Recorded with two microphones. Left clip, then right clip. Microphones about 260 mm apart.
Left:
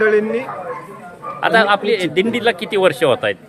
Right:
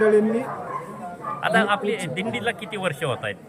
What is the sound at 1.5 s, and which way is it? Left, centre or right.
A man's voice, left.